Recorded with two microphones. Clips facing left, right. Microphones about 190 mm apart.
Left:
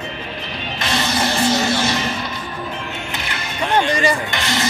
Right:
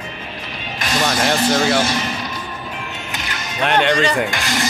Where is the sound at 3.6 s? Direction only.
70° right (ahead or behind).